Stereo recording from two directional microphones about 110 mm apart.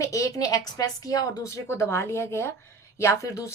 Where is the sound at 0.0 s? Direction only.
30° left (ahead or behind).